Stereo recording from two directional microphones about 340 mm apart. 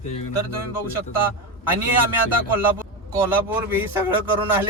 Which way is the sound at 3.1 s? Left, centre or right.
Centre.